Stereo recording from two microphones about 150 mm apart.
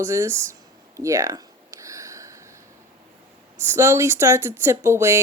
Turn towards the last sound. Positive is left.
turn(degrees=-20)  # may be behind; listen again after turning